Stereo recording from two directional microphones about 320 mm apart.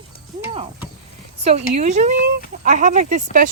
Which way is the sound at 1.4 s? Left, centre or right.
Centre.